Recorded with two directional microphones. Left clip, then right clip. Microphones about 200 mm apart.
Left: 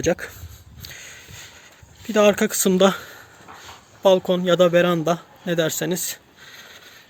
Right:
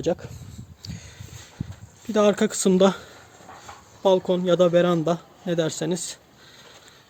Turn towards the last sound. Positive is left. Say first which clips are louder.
# left 6 dB
turn(degrees=0)  # may be behind; listen again after turning